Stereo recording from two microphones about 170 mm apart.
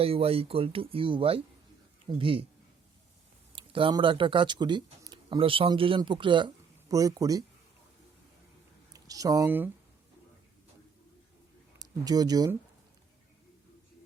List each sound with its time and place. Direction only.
0.0 s speech: 35° right (ahead or behind)
3.5 s speech: 30° right (ahead or behind)
8.9 s speech: 20° right (ahead or behind)
11.8 s speech: 20° right (ahead or behind)